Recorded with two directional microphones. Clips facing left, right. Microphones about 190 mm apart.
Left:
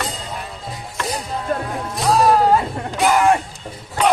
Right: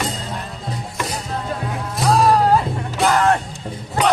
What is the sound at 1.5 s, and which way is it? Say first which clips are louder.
Music: left 7 dB; 50° left (ahead or behind).